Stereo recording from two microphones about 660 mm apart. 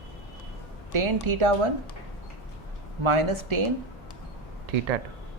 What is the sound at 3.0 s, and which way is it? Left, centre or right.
Speech, right.